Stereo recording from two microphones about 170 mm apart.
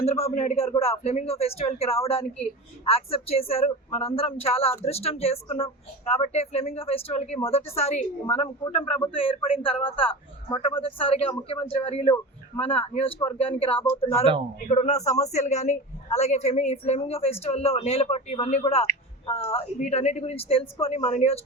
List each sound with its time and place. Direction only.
0.0 s speech: 40° left (ahead or behind)